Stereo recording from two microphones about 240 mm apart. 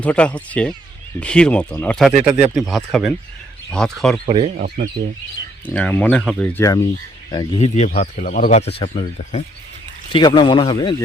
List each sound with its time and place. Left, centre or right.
0.0 s speech: centre
4.3 s speech: right
4.5 s speech: right
5.6 s speech: centre
7.3 s speech: centre